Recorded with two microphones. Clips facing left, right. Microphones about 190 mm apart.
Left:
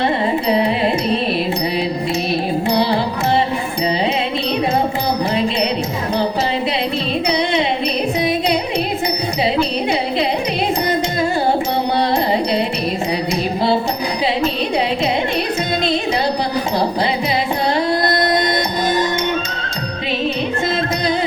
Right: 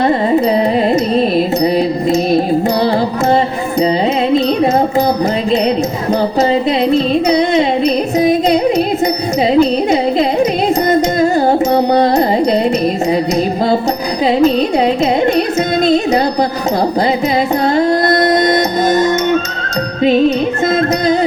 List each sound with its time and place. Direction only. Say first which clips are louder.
1.6 s music: right 7 dB; 45° right (ahead or behind)
6.5 s music: right 8 dB; 45° right (ahead or behind)
9.6 s a sound: right 7 dB; 45° right (ahead or behind)
10.8 s carnatic music: right 7 dB; 45° right (ahead or behind)
17.7 s music: right 7 dB; 45° right (ahead or behind)